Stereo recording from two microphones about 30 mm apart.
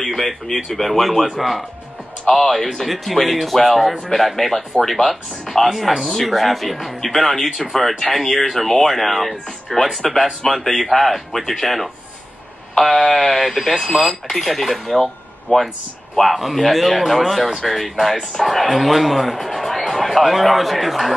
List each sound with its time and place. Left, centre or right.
0.1 s speech: centre
2.2 s speech: centre
15.5 s speech: left
16.3 s a man's voice: centre